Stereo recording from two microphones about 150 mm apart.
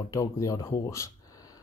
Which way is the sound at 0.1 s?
20° left (ahead or behind).